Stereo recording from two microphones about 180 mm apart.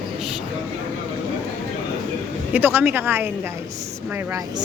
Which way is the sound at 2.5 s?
10° right (ahead or behind).